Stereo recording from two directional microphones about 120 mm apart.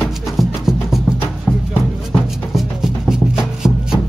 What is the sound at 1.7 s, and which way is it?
Music, 15° left (ahead or behind).